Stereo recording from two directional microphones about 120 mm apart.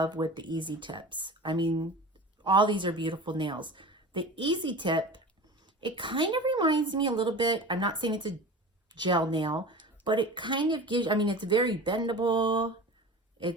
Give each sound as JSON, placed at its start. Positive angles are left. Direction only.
{"t": 0.0, "sound": "speech", "side_deg": -40}